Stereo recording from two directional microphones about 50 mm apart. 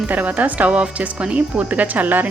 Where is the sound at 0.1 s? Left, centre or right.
Right.